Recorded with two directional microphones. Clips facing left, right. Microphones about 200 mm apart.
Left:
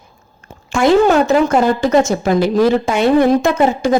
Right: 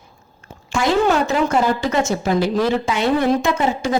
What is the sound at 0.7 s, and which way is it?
A woman's voice, 50° left (ahead or behind).